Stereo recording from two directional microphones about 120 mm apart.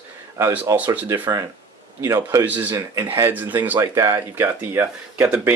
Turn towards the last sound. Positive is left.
turn(degrees=-15)  # may be behind; listen again after turning